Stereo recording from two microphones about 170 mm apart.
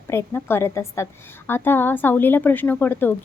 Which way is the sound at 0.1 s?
15° left (ahead or behind).